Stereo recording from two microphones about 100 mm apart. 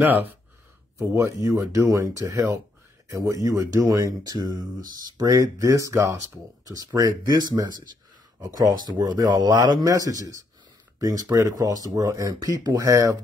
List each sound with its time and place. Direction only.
0.0 s speech: 20° right (ahead or behind)
0.9 s speech: 30° right (ahead or behind)
7.0 s speech: 45° right (ahead or behind)
9.8 s speech: 35° right (ahead or behind)